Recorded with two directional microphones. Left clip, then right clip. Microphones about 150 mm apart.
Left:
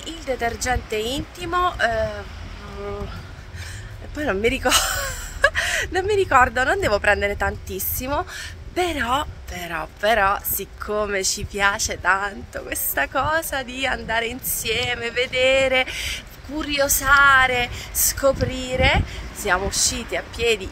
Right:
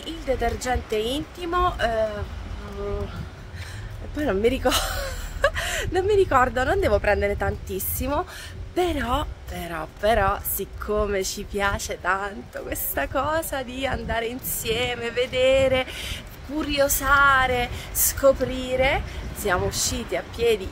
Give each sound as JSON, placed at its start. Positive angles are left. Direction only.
{"t": 0.0, "sound": "speech", "side_deg": -5}
{"t": 4.2, "sound": "speech", "side_deg": 0}